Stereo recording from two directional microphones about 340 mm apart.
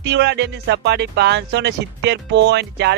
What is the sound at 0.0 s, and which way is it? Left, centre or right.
Speech, right.